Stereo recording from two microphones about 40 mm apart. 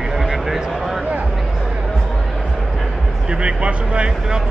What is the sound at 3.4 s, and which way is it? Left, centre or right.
Speech, right.